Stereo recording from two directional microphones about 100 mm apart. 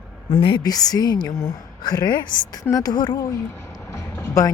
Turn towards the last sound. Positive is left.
turn(degrees=25)  # may be behind; listen again after turning